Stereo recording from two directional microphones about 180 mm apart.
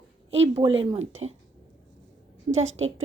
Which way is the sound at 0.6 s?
30° right (ahead or behind).